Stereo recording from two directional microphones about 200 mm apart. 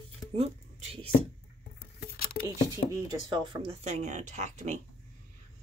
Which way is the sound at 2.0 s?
50° left (ahead or behind).